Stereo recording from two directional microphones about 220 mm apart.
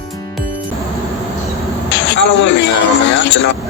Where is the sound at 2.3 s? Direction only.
55° left (ahead or behind).